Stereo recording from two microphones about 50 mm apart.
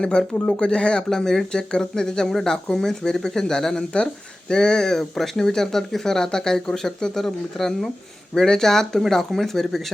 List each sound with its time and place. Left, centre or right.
0.0 s speech: centre